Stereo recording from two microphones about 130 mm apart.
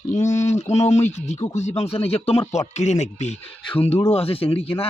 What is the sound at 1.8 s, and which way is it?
Speech, 50° left (ahead or behind).